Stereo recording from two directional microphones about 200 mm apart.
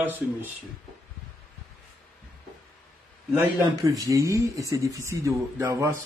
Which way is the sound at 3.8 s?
15° right (ahead or behind).